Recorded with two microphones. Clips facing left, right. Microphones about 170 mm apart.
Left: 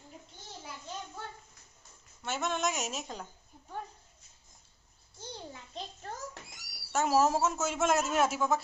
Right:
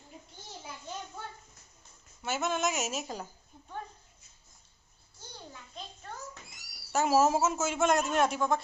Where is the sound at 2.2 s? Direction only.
5° right (ahead or behind).